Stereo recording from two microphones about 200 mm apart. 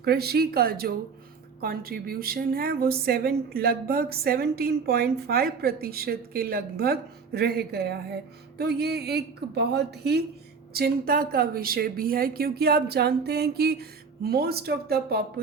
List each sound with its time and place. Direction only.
0.0 s a woman's voice: 50° right (ahead or behind)